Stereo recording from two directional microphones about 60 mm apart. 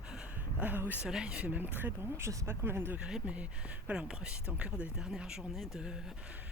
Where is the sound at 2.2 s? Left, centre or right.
Right.